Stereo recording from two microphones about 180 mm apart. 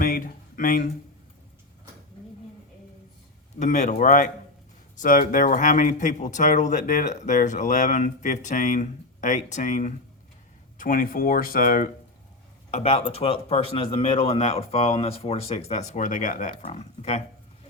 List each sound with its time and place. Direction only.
0.0 s a sound: 50° left (ahead or behind)
3.6 s speech: 40° left (ahead or behind)
12.7 s speech: 35° left (ahead or behind)